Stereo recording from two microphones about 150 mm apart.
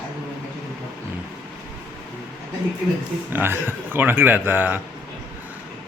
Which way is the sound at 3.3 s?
15° right (ahead or behind).